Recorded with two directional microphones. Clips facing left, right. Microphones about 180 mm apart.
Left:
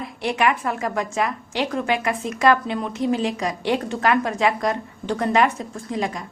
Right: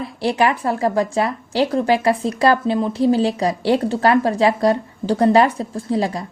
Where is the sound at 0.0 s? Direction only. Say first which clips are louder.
Right 3 dB; 30° right (ahead or behind).